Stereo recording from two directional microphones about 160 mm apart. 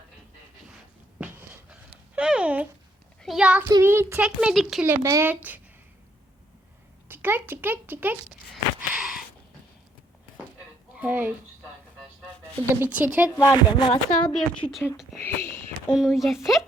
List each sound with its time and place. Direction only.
2.1 s a sound: 5° right (ahead or behind)
3.2 s a child's voice: centre (ahead or behind)
3.7 s a child's voice: 20° right (ahead or behind)
4.9 s a child's voice: 15° right (ahead or behind)
7.1 s a child's voice: 15° right (ahead or behind)
9.0 s a sound: centre (ahead or behind)
10.9 s a child's voice: 10° right (ahead or behind)
12.8 s a child's voice: 10° right (ahead or behind)
13.3 s speech: 10° left (ahead or behind)
13.7 s speech: 30° left (ahead or behind)
14.2 s a woman's voice: 5° left (ahead or behind)
15.2 s speech: 15° left (ahead or behind)
15.9 s a woman's voice: centre (ahead or behind)